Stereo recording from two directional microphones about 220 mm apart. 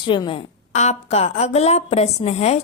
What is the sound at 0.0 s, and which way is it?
A woman's voice, 20° left (ahead or behind).